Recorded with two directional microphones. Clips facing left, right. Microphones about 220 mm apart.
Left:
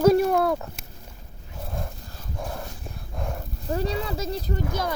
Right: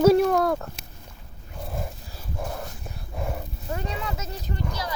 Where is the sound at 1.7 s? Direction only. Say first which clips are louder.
Right 1 dB; 5° right (ahead or behind).